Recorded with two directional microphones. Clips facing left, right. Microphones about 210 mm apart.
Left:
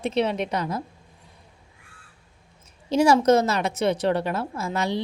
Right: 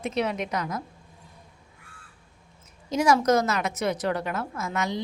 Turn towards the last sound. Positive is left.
turn(degrees=30)  # may be behind; listen again after turning